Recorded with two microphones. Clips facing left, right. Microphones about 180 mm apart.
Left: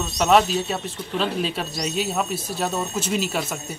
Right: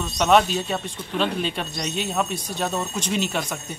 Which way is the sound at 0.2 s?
5° left (ahead or behind).